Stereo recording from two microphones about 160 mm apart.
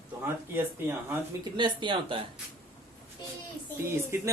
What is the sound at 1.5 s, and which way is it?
Speech, 30° right (ahead or behind).